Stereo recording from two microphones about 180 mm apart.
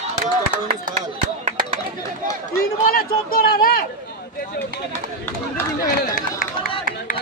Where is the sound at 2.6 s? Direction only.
55° left (ahead or behind).